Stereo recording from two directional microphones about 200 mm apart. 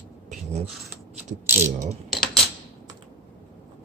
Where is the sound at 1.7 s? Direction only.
35° right (ahead or behind).